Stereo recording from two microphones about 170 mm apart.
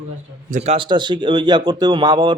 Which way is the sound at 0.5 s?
40° right (ahead or behind).